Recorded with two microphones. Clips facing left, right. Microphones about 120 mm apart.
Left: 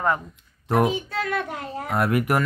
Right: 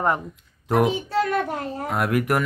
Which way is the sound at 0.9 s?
40° right (ahead or behind).